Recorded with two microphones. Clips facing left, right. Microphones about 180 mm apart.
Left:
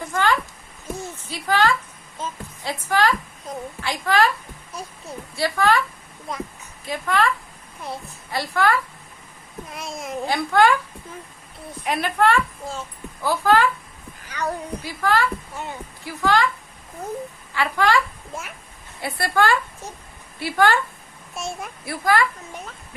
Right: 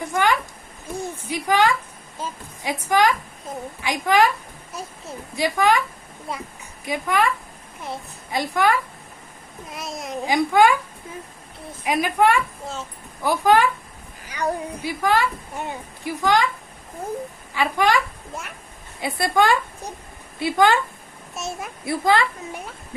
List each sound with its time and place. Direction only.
0.1 s a sound: 15° right (ahead or behind)
3.8 s a woman's voice: 15° right (ahead or behind)
5.4 s a woman's voice: 15° right (ahead or behind)
6.8 s a woman's voice: 15° right (ahead or behind)
8.3 s a woman's voice: 15° right (ahead or behind)
9.6 s a child's voice: centre (ahead or behind)
10.2 s a woman's voice: 15° right (ahead or behind)
17.5 s a woman's voice: 15° right (ahead or behind)
21.3 s a child's voice: centre (ahead or behind)
21.8 s a woman's voice: 25° right (ahead or behind)